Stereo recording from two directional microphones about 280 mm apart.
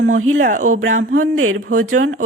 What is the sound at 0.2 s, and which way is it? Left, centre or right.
Speech, right.